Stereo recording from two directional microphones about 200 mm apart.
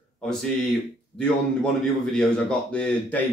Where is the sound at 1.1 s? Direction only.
5° left (ahead or behind).